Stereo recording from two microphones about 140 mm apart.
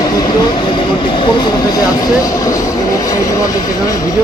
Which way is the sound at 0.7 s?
35° left (ahead or behind).